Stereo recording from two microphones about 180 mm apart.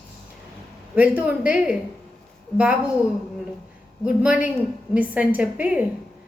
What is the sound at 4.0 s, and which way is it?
A woman's voice, 5° right (ahead or behind).